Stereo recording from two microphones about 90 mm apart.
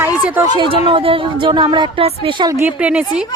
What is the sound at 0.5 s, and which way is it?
Speech, 70° right (ahead or behind).